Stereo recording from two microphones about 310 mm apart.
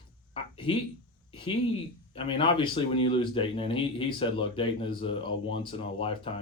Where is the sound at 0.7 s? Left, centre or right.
Centre.